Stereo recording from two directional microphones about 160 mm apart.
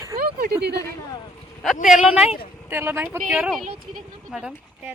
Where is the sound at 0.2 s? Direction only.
65° right (ahead or behind).